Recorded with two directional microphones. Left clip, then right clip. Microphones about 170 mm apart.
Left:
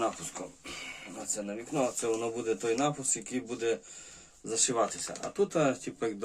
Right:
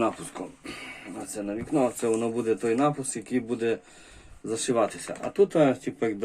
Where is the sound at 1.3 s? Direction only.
10° right (ahead or behind).